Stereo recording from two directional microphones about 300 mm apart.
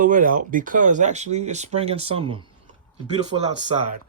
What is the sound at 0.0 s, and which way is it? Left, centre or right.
Speech, right.